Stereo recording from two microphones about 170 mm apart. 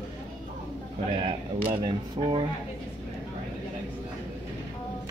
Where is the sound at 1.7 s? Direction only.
25° right (ahead or behind).